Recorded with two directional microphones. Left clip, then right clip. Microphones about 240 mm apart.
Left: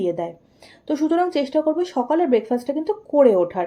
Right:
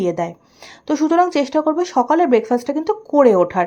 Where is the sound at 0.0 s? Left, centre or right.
Right.